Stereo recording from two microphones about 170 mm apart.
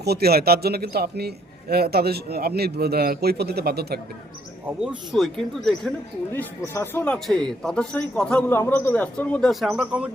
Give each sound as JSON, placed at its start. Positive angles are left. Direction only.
{"t": 0.0, "sound": "speech", "side_deg": -70}
{"t": 4.8, "sound": "speech", "side_deg": 0}
{"t": 6.3, "sound": "a man's voice", "side_deg": 15}